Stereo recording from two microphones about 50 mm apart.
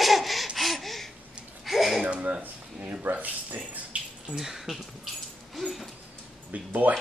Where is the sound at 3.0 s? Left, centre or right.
Right.